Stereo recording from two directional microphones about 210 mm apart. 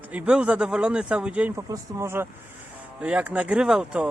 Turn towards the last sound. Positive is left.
turn(degrees=-5)  # may be behind; listen again after turning